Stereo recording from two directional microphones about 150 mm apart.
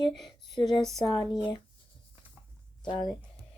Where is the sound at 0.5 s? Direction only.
Centre (ahead or behind).